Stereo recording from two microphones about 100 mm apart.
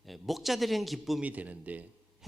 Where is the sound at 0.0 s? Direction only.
Centre (ahead or behind).